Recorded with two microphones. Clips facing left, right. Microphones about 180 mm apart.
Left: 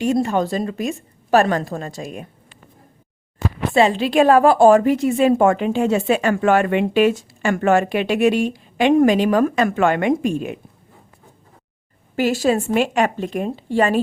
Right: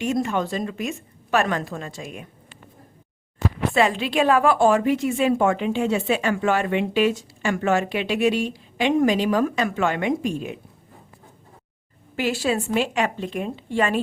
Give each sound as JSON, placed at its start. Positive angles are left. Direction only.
{"t": 0.0, "sound": "a woman's voice", "side_deg": 35}
{"t": 3.8, "sound": "a woman's voice", "side_deg": 30}
{"t": 12.1, "sound": "a woman's voice", "side_deg": 45}